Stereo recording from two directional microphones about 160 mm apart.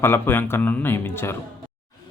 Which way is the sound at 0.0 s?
15° left (ahead or behind).